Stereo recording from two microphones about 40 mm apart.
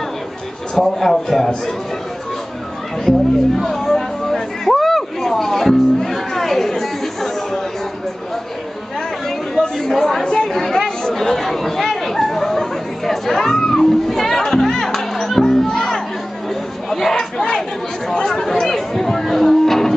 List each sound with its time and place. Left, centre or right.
0.7 s a man's voice: centre
3.1 s hubbub: centre
9.6 s chatter: centre
16.9 s crowd: centre
18.3 s chatter: centre